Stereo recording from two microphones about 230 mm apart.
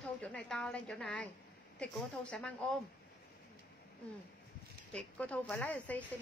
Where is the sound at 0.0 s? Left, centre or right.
Centre.